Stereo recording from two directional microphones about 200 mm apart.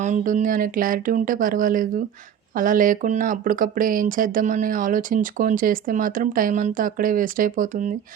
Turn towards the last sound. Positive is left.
turn(degrees=-40)  # may be behind; listen again after turning